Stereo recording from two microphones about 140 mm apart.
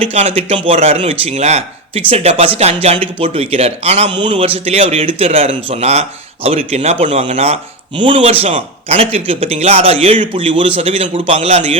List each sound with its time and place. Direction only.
0.0 s speech: 50° right (ahead or behind)
4.1 s speech: 35° right (ahead or behind); by 7.6 s 50° right (ahead or behind)
7.9 s speech: 40° right (ahead or behind)